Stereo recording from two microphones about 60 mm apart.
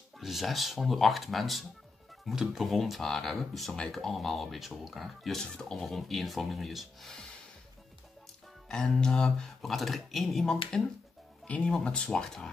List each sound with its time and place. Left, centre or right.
0.2 s speech: centre
8.6 s speech: centre